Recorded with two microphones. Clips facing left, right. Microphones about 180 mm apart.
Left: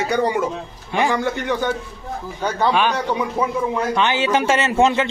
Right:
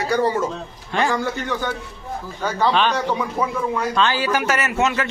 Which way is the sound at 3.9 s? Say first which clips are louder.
Left 2 dB; 20° left (ahead or behind).